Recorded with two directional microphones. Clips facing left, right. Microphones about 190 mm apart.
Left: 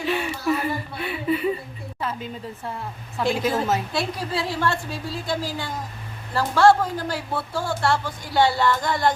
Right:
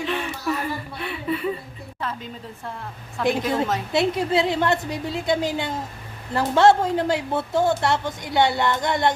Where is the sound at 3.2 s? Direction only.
5° left (ahead or behind).